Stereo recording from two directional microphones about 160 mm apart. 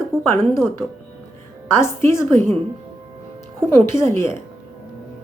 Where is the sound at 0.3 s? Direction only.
15° left (ahead or behind).